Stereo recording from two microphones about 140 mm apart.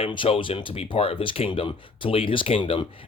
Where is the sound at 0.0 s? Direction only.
40° left (ahead or behind).